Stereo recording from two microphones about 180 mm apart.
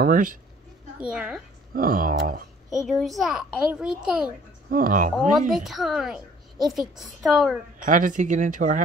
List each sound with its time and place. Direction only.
0.0 s speech: 50° right (ahead or behind)
0.9 s a woman's voice: 5° right (ahead or behind)
1.8 s speech: 50° right (ahead or behind)
2.7 s a woman's voice: centre (ahead or behind)
4.6 s speech: 50° right (ahead or behind)
5.5 s a woman's voice: centre (ahead or behind)
7.8 s speech: 45° right (ahead or behind)